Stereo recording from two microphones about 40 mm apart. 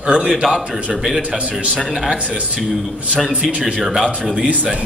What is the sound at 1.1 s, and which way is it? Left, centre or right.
Speech, right.